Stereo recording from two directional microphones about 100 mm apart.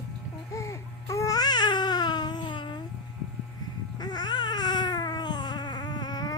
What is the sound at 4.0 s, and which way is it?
Baby cry, 45° left (ahead or behind).